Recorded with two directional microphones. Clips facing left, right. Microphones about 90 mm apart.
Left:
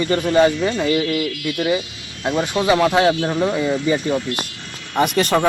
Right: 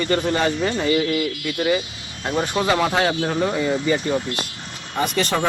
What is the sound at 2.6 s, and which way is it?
Speech, 5° left (ahead or behind).